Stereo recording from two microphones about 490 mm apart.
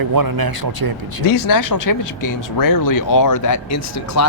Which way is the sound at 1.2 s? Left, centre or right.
Left.